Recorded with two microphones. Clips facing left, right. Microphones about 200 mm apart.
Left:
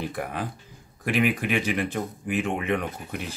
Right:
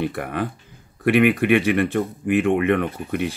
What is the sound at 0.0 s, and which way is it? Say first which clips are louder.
Speech: right 6 dB; 65° right (ahead or behind).